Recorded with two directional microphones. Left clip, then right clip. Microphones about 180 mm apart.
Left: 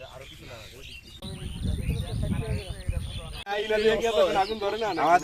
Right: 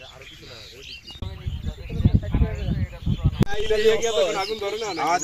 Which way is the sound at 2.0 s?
60° left (ahead or behind).